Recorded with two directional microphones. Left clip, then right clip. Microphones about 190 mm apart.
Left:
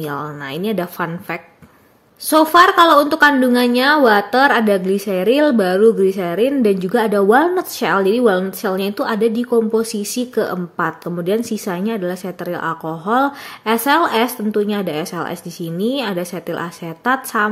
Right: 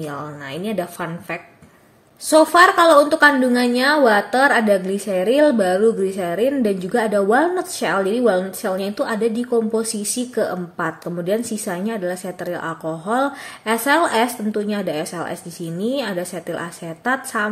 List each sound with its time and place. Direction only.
0.0 s a woman's voice: 35° left (ahead or behind)